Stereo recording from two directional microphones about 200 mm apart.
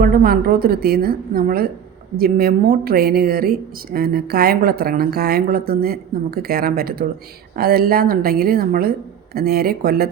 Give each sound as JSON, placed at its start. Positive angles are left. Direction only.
{"t": 0.0, "sound": "speech", "side_deg": -50}